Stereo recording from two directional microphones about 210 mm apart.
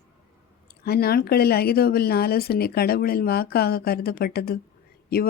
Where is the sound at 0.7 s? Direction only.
50° left (ahead or behind).